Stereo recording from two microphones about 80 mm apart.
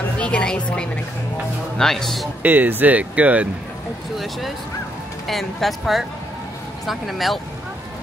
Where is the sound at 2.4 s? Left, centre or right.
Right.